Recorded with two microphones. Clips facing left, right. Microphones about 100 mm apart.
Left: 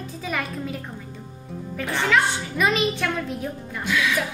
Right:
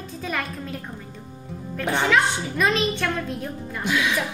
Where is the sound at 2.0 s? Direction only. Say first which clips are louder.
Left 1 dB; centre (ahead or behind).